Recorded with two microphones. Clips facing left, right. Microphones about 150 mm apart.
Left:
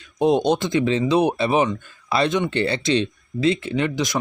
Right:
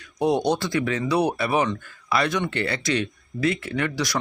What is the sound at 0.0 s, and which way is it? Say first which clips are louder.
Speech: left 3 dB; 20° left (ahead or behind).